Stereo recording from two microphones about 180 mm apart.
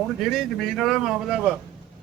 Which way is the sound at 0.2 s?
Centre (ahead or behind).